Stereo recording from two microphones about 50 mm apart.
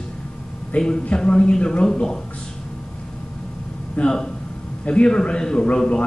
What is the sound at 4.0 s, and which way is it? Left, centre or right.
A man's voice, centre.